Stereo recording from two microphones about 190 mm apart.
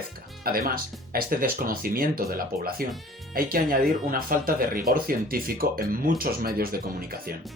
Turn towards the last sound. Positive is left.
turn(degrees=-50)  # may be behind; listen again after turning